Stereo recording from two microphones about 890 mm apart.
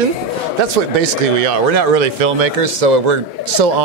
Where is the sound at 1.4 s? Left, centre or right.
Right.